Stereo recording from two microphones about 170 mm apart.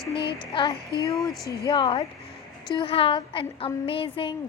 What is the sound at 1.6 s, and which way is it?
A woman's voice, 25° left (ahead or behind).